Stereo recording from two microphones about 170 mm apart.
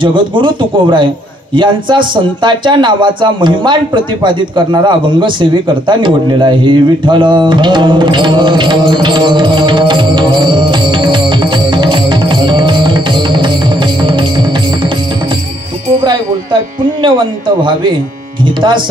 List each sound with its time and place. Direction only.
0.0 s a man's voice: 30° right (ahead or behind)
17.0 s speech: 30° right (ahead or behind)